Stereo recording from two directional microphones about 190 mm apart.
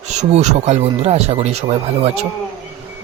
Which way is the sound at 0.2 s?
35° right (ahead or behind).